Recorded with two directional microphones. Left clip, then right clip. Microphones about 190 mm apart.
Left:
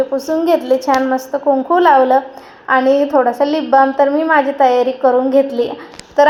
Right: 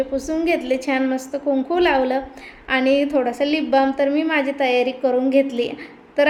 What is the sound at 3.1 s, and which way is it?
Speech, 15° right (ahead or behind).